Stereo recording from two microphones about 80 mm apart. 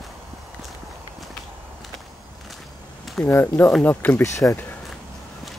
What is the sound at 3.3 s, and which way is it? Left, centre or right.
Speech, left.